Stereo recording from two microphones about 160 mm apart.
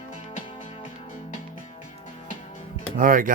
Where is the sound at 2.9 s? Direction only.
60° right (ahead or behind).